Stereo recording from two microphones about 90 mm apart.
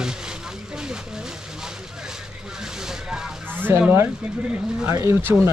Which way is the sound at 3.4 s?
20° right (ahead or behind).